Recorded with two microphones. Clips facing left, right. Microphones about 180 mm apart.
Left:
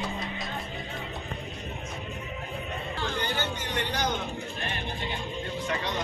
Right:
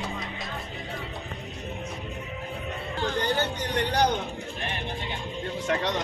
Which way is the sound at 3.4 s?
35° right (ahead or behind).